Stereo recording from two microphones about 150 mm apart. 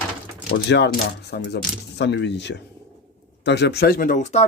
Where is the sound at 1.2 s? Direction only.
90° left.